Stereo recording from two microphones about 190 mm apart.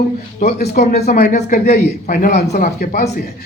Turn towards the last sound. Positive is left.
turn(degrees=50)  # may be behind; listen again after turning